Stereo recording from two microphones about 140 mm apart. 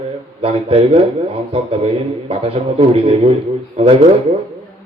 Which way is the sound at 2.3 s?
45° right (ahead or behind).